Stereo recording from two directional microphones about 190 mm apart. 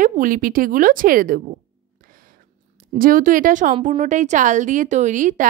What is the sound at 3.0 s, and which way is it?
A woman's voice, 45° right (ahead or behind).